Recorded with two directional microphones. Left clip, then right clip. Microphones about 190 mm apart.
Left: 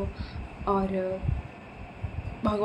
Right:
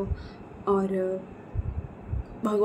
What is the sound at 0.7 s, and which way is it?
Speech, 10° right (ahead or behind).